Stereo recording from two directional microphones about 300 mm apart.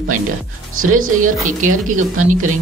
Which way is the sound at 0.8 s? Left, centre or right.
Right.